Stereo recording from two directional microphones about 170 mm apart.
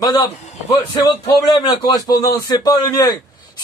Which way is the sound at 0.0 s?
25° left (ahead or behind).